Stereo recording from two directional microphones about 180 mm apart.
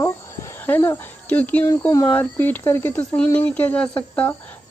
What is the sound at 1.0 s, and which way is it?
Speech, 10° left (ahead or behind).